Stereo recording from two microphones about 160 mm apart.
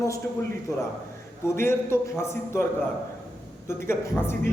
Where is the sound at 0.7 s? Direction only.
20° left (ahead or behind).